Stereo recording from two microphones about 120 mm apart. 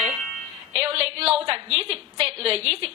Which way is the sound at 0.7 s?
55° right (ahead or behind).